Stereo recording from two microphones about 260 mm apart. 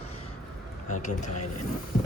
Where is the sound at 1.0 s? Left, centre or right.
Left.